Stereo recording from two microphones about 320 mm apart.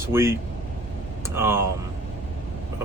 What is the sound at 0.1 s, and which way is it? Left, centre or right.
Speech, centre.